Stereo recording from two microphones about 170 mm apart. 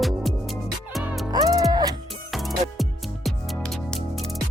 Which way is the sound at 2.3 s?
Centre (ahead or behind).